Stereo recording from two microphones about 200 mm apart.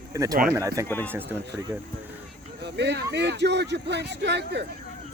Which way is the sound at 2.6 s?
60° right (ahead or behind).